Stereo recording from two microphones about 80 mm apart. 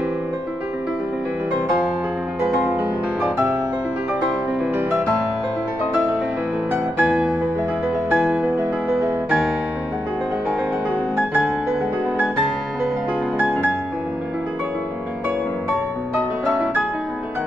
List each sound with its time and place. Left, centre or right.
7.0 s music: centre
11.1 s music: right